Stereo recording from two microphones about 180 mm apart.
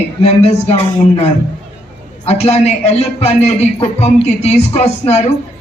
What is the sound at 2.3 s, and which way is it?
A man's voice, 35° left (ahead or behind).